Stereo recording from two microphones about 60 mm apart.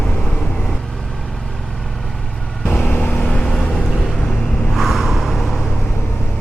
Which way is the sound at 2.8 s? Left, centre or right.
Left.